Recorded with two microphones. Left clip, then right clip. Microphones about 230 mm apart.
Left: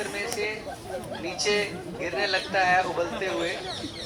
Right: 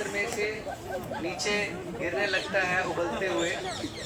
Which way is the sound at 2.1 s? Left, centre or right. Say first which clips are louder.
Left 3 dB; left.